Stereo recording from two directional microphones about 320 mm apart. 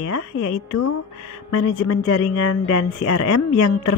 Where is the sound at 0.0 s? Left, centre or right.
Left.